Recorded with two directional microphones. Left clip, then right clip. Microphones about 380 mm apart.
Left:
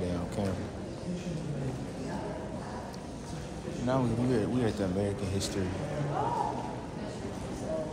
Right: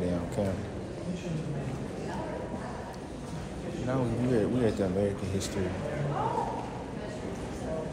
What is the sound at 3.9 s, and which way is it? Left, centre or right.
Speech, centre.